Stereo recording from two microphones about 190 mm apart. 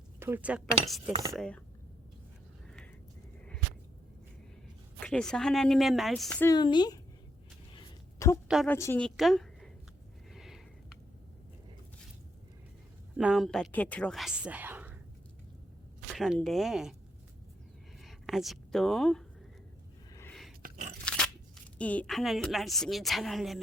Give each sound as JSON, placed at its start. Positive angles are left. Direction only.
{"t": 0.2, "sound": "a woman's voice", "side_deg": -10}
{"t": 4.9, "sound": "a woman's voice", "side_deg": 5}
{"t": 6.5, "sound": "speech", "side_deg": 25}
{"t": 7.8, "sound": "a sound", "side_deg": 15}
{"t": 8.6, "sound": "a woman's voice", "side_deg": 10}
{"t": 10.3, "sound": "a sound", "side_deg": 0}
{"t": 13.1, "sound": "a woman's voice", "side_deg": 0}
{"t": 16.1, "sound": "a woman's voice", "side_deg": 0}
{"t": 18.0, "sound": "speech", "side_deg": 0}
{"t": 20.6, "sound": "biting", "side_deg": -45}
{"t": 21.0, "sound": "crunch", "side_deg": 5}
{"t": 21.8, "sound": "a woman's voice", "side_deg": 5}